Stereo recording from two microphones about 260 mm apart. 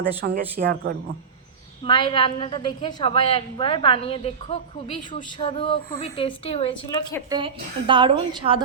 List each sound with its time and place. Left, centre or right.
0.2 s speech: right
1.8 s a woman's voice: centre
7.3 s a woman's voice: centre